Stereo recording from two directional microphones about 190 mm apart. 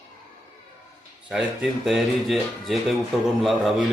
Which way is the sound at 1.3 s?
5° right (ahead or behind).